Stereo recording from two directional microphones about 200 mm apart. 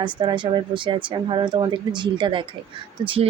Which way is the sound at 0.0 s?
25° right (ahead or behind).